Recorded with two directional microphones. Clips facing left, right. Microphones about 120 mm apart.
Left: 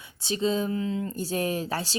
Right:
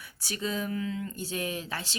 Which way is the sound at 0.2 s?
25° left (ahead or behind).